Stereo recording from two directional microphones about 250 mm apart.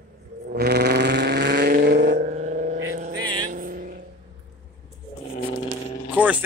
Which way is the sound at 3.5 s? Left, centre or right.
Right.